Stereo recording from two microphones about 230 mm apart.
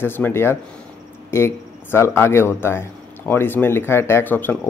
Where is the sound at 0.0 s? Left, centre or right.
Centre.